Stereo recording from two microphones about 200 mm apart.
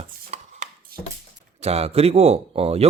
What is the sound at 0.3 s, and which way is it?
Chopping, 30° right (ahead or behind).